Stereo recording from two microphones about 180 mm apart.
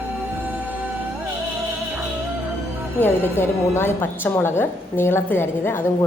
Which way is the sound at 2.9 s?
10° left (ahead or behind).